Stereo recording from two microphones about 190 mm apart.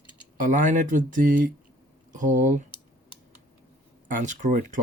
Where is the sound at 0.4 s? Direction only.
40° right (ahead or behind).